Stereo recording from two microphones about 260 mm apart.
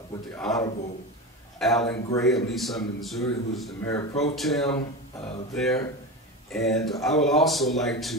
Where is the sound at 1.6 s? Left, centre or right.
Centre.